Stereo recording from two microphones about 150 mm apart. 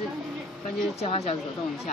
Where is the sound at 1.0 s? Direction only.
45° left (ahead or behind).